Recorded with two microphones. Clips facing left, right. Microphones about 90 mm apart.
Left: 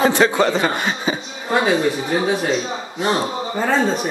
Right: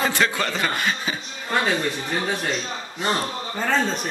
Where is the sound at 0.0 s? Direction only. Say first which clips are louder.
Left 7 dB; 25° left (ahead or behind).